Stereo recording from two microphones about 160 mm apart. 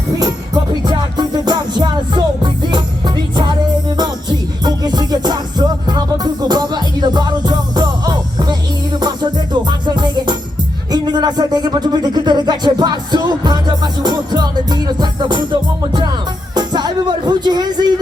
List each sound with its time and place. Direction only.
0.2 s music: 25° right (ahead or behind)
3.9 s music: 25° right (ahead or behind)